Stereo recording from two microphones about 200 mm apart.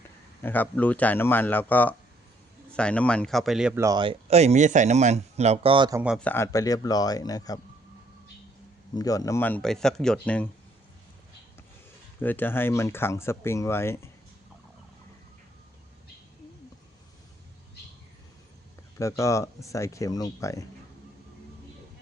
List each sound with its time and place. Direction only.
0.4 s speech: 10° left (ahead or behind)
3.8 s speech: 20° right (ahead or behind)
6.1 s speech: 10° left (ahead or behind)
9.0 s speech: 15° left (ahead or behind)
12.2 s speech: 10° left (ahead or behind)
18.9 s speech: 15° left (ahead or behind)